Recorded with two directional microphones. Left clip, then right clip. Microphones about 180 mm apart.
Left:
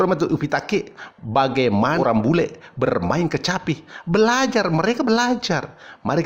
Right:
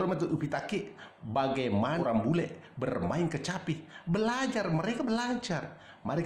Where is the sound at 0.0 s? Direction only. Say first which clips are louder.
Left 12 dB; 45° left (ahead or behind).